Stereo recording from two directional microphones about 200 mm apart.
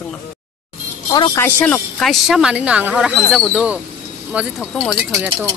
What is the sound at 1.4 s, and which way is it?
Speech, 10° left (ahead or behind).